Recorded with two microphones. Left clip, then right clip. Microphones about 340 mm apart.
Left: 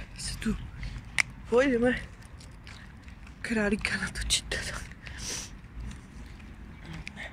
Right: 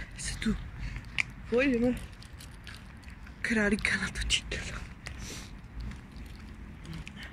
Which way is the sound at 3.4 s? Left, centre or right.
Centre.